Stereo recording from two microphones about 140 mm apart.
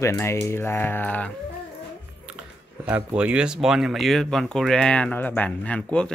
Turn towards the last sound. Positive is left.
turn(degrees=10)  # may be behind; listen again after turning